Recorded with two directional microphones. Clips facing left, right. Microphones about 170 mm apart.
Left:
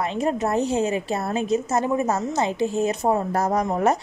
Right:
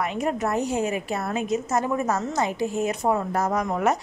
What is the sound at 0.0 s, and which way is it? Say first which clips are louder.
A woman's voice: left 2 dB; 30° left (ahead or behind).